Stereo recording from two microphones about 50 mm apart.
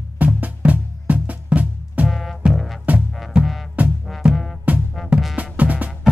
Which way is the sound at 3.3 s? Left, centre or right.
Right.